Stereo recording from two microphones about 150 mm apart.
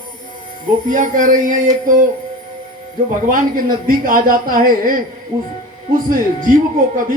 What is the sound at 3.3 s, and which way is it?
Speech, 65° right (ahead or behind).